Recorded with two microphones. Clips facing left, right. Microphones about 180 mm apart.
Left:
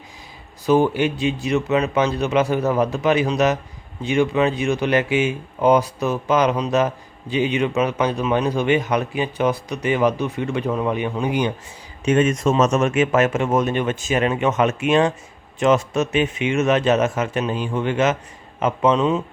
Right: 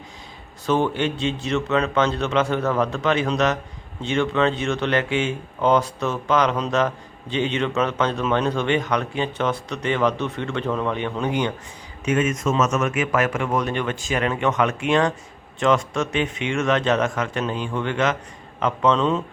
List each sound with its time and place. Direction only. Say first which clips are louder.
0.7 s speech: left 4 dB; 15° left (ahead or behind)
12.0 s speech: left 4 dB; 30° left (ahead or behind)
18.9 s speech: left 2 dB; 10° left (ahead or behind)